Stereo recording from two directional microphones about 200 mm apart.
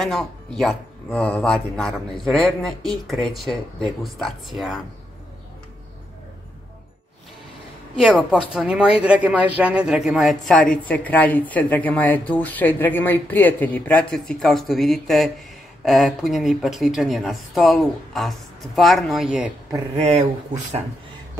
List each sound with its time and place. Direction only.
0.0 s speech: centre (ahead or behind)
8.2 s a woman's voice: 5° right (ahead or behind)
20.0 s speech: 35° right (ahead or behind)